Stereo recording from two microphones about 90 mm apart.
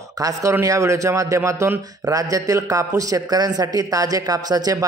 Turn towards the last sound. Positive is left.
turn(degrees=-45)  # may be behind; listen again after turning